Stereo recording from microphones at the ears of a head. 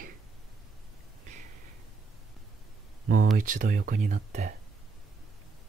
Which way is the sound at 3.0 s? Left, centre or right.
Right.